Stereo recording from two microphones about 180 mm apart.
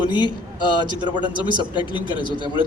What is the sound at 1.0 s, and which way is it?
Speech, 25° right (ahead or behind).